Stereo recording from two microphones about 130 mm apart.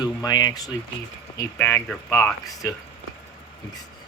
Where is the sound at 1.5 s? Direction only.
10° left (ahead or behind).